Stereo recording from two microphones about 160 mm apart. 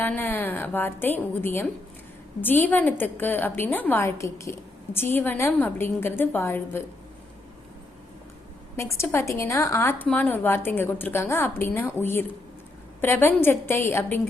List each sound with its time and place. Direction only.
0.0 s a woman's voice: 10° left (ahead or behind)
8.7 s a woman's voice: 15° left (ahead or behind)